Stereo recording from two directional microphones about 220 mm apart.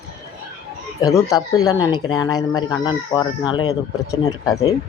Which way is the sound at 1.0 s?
15° left (ahead or behind).